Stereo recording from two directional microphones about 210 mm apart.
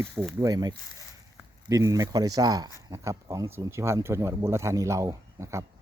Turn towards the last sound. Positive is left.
turn(degrees=-15)  # may be behind; listen again after turning